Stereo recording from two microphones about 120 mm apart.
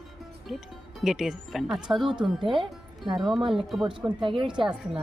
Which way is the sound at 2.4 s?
45° right (ahead or behind).